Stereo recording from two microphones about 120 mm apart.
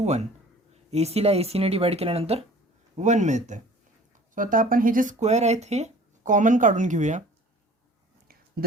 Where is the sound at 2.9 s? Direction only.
85° right.